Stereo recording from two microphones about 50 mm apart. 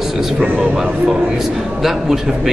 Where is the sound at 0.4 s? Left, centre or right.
Centre.